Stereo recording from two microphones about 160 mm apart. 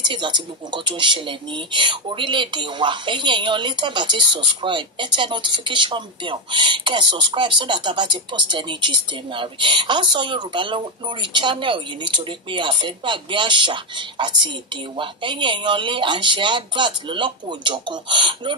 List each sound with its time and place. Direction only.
0.0 s speech: 30° right (ahead or behind)